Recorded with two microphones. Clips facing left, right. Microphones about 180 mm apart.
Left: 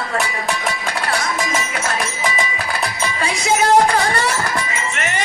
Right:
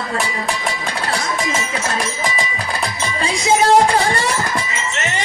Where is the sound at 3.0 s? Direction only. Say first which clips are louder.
Right 2 dB; 30° right (ahead or behind).